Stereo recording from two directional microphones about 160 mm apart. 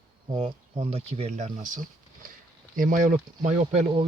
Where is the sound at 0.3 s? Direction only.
35° right (ahead or behind).